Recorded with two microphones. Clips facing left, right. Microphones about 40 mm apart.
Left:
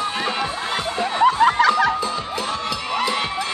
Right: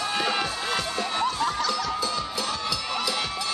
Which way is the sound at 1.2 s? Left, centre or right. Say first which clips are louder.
Left 13 dB; left.